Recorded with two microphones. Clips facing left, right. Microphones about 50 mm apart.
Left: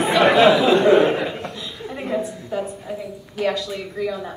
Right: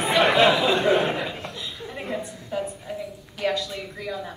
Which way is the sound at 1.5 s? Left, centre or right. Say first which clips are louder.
Left 2 dB; left.